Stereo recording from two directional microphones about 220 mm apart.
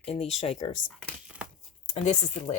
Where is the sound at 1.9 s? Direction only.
30° left (ahead or behind).